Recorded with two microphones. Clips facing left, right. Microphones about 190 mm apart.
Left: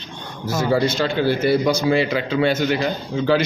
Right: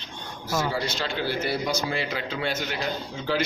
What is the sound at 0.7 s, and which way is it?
A man's voice, 50° left (ahead or behind).